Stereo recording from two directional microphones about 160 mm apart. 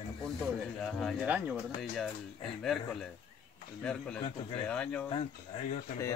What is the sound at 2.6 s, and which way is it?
Speech, centre (ahead or behind).